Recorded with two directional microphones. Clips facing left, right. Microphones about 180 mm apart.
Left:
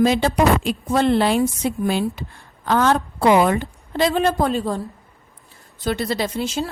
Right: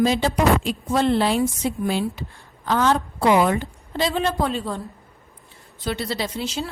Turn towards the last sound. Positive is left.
turn(degrees=50)  # may be behind; listen again after turning